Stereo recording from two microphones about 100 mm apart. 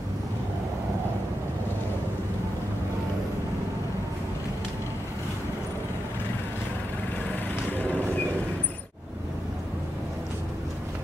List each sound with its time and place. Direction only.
7.7 s vehicle: 15° left (ahead or behind)